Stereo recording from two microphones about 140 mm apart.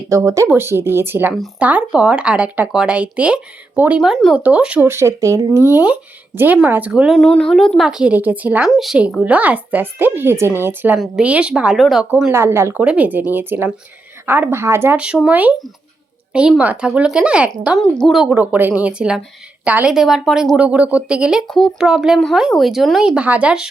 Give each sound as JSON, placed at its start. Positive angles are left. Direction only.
{"t": 0.1, "sound": "speech", "side_deg": -25}
{"t": 7.2, "sound": "a woman's voice", "side_deg": 5}
{"t": 12.1, "sound": "a woman's voice", "side_deg": -15}
{"t": 18.3, "sound": "a woman's voice", "side_deg": -10}